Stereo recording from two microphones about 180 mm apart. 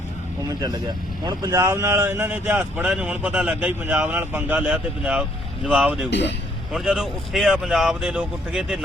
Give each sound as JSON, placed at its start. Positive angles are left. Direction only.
{"t": 0.4, "sound": "a man's voice", "side_deg": -20}
{"t": 6.1, "sound": "speech", "side_deg": 75}
{"t": 6.7, "sound": "speech", "side_deg": 0}